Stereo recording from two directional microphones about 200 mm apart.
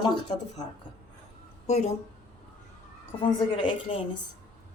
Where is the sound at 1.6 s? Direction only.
35° left (ahead or behind).